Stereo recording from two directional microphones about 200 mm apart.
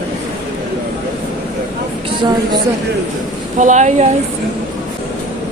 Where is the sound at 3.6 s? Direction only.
35° right (ahead or behind).